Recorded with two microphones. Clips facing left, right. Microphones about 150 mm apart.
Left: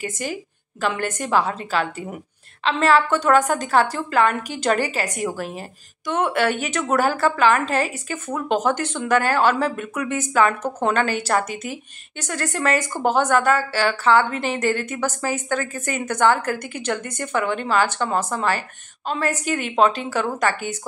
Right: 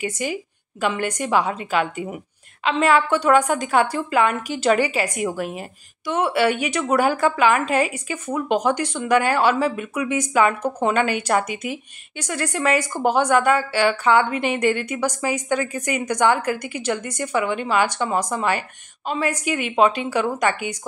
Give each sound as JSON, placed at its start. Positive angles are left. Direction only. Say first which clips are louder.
{"t": 0.1, "sound": "a woman's voice", "louder": "right 2 dB", "side_deg": -10}
{"t": 11.5, "sound": "speech", "louder": "right 2 dB", "side_deg": 45}
{"t": 12.2, "sound": "a woman's voice", "louder": "right 1 dB", "side_deg": -10}